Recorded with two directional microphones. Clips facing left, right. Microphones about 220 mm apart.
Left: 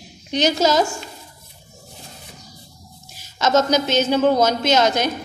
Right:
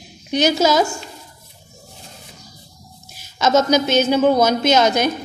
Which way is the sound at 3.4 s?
10° right (ahead or behind).